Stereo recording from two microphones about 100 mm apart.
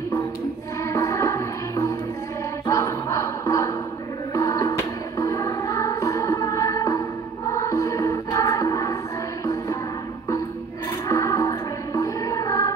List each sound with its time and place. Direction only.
0.8 s music: 30° left (ahead or behind)
11.1 s music: 35° left (ahead or behind)